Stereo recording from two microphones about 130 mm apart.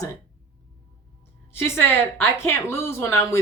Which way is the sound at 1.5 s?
20° left (ahead or behind).